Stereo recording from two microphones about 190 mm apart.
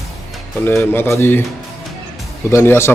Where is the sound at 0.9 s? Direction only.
10° left (ahead or behind).